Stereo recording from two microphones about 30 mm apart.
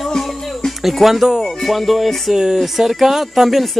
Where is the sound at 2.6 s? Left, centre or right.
Centre.